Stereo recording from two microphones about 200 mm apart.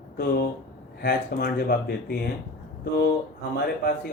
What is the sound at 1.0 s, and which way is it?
Speech, 50° left (ahead or behind).